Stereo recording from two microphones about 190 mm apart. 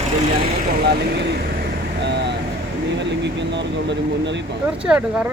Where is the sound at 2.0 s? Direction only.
65° right (ahead or behind).